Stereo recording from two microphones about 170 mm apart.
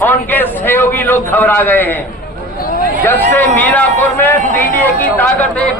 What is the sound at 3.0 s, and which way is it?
A man's voice, 10° left (ahead or behind).